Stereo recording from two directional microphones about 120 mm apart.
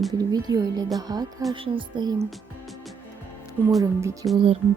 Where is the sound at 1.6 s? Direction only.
45° right (ahead or behind).